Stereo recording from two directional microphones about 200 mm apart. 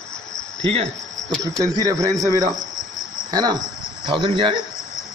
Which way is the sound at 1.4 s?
15° right (ahead or behind).